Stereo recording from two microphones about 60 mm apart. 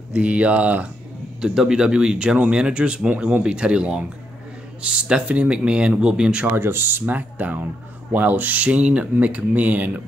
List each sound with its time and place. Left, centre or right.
0.1 s speech: centre
1.4 s speech: centre
6.4 s speech: right